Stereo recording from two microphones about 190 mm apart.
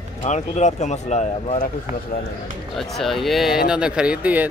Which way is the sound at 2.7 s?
Centre (ahead or behind).